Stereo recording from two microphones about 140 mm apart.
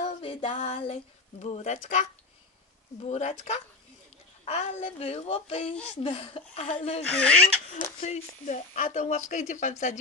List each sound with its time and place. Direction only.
0.0 s a sound: 50° left (ahead or behind)
1.4 s a woman's voice: 55° left (ahead or behind)
7.1 s speech: 10° left (ahead or behind)
8.0 s a woman's voice: 60° left (ahead or behind)